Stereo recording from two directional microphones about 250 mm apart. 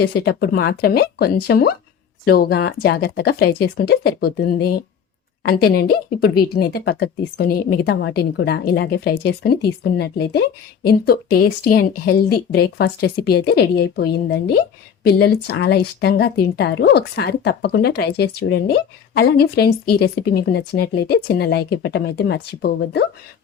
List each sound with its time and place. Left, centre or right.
0.0 s a woman's voice: left